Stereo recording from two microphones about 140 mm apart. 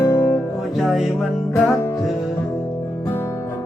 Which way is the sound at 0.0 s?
20° left (ahead or behind).